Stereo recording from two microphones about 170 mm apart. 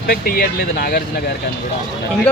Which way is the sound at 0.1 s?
60° left (ahead or behind).